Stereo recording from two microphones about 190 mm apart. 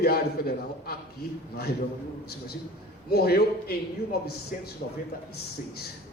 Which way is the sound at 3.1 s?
55° left (ahead or behind).